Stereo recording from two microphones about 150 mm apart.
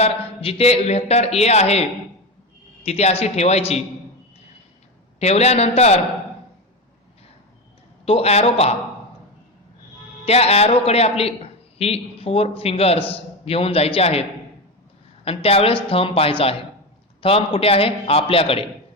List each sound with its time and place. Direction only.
0.0 s a man's voice: 40° left (ahead or behind)
5.2 s a man's voice: 45° left (ahead or behind)
8.0 s a man's voice: 40° left (ahead or behind)
10.2 s a man's voice: 45° left (ahead or behind)